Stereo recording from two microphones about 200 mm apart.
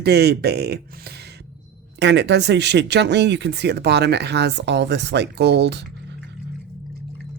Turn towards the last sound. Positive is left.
turn(degrees=-55)  # may be behind; listen again after turning